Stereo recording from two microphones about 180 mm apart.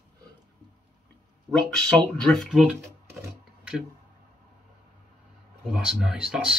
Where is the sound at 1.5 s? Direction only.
25° right (ahead or behind).